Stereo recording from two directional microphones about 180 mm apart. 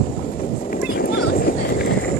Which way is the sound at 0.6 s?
50° left (ahead or behind).